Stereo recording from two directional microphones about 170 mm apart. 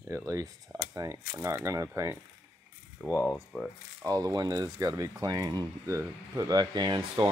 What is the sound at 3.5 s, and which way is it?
Speech, centre (ahead or behind).